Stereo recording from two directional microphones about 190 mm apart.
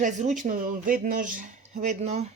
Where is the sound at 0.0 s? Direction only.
40° right (ahead or behind).